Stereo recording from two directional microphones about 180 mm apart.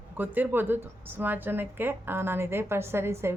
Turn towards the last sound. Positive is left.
turn(degrees=-15)  # may be behind; listen again after turning